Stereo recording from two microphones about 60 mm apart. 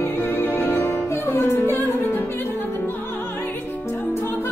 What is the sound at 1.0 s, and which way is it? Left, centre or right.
Music, left.